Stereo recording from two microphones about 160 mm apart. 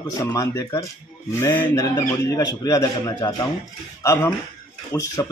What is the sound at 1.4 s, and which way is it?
Mantra, 15° left (ahead or behind).